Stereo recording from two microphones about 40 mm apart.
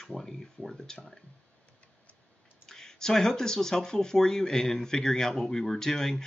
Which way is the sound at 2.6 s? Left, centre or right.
Centre.